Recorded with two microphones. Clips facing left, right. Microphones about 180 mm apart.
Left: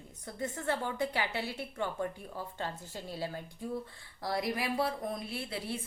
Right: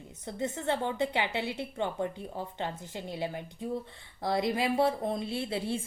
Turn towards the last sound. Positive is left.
turn(degrees=-25)  # may be behind; listen again after turning